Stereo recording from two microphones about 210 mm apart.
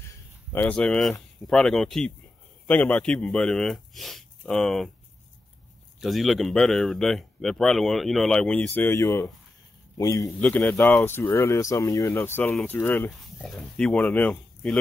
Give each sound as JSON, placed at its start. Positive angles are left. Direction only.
{"t": 0.1, "sound": "a sound", "side_deg": 10}
{"t": 1.5, "sound": "speech", "side_deg": 0}
{"t": 5.9, "sound": "speech", "side_deg": 0}